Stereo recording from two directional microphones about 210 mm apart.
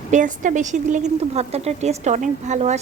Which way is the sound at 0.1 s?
40° right (ahead or behind).